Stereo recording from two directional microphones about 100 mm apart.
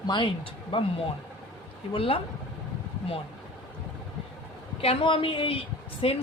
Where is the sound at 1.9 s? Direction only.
65° left (ahead or behind).